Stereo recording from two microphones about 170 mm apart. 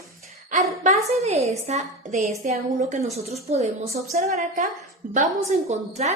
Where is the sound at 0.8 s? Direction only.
40° right (ahead or behind).